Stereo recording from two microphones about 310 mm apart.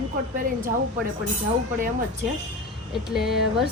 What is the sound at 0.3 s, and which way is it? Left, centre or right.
Speech, right.